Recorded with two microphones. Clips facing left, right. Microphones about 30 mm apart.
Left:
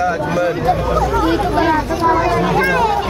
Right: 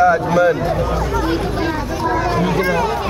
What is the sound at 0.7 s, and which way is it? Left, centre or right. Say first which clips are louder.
Speech: left 2 dB; centre.